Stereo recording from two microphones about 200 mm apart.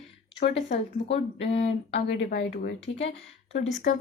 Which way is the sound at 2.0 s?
55° left (ahead or behind).